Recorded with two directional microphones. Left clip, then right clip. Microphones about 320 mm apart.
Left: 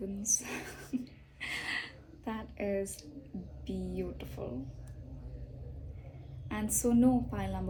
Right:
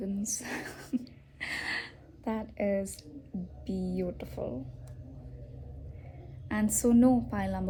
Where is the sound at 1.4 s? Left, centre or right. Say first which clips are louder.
Right 2 dB; right.